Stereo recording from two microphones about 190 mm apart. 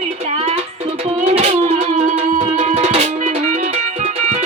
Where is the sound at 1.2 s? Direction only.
35° right (ahead or behind).